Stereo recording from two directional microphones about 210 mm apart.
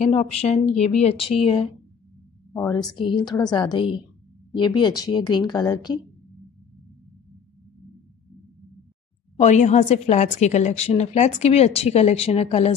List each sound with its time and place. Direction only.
0.0 s a woman's voice: 30° left (ahead or behind)
2.5 s a woman's voice: 15° left (ahead or behind)
9.4 s a woman's voice: 35° left (ahead or behind)